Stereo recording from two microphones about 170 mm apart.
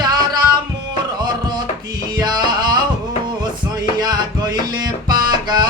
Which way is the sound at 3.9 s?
25° right (ahead or behind).